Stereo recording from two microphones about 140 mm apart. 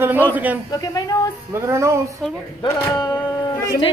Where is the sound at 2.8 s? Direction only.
25° left (ahead or behind).